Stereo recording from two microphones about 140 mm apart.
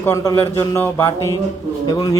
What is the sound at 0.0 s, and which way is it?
Speech, 20° left (ahead or behind).